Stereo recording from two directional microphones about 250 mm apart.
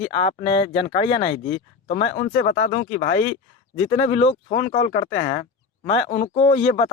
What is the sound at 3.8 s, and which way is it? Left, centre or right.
Speech, left.